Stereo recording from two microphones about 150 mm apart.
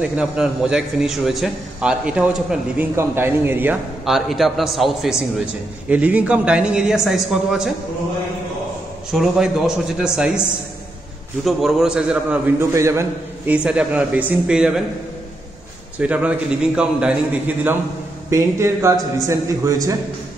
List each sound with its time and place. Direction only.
0.0 s a man's voice: 5° right (ahead or behind)
4.0 s a man's voice: centre (ahead or behind)
9.1 s a man's voice: centre (ahead or behind)
11.4 s a man's voice: centre (ahead or behind)
12.7 s a man's voice: 20° right (ahead or behind)
13.5 s a woman's voice: 10° right (ahead or behind)
16.0 s a woman's voice: 10° right (ahead or behind)
18.3 s a man's voice: 20° right (ahead or behind)